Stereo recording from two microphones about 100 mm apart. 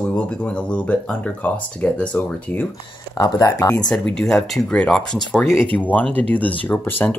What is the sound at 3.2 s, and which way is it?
Speech, 35° left (ahead or behind).